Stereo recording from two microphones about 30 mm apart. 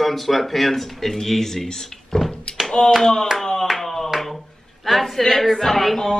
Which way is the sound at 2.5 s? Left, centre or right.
Left.